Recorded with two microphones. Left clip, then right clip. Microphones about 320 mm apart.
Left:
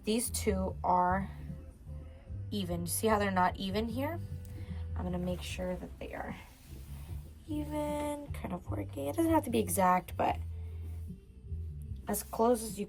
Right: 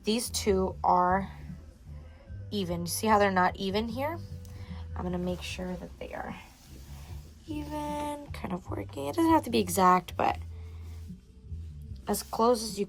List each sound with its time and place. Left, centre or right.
0.0 s speech: right
2.5 s speech: right
7.5 s speech: right
12.0 s speech: right